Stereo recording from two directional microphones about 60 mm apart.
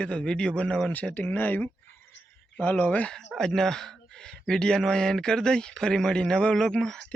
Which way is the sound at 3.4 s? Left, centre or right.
Centre.